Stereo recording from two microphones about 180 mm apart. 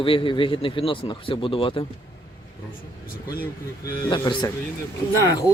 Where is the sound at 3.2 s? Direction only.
55° left (ahead or behind).